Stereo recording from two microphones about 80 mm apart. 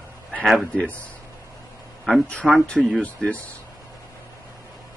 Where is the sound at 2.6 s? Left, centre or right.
Centre.